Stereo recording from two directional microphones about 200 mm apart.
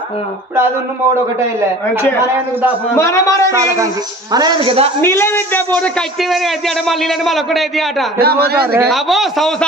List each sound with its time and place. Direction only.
3.0 s speech: 15° left (ahead or behind)
3.4 s speech: 15° right (ahead or behind)
5.0 s a man's voice: 10° left (ahead or behind)
8.2 s a man's voice: 50° right (ahead or behind)
8.9 s a man's voice: centre (ahead or behind)